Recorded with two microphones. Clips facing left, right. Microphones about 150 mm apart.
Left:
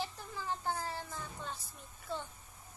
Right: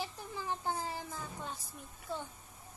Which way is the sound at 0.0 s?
15° right (ahead or behind).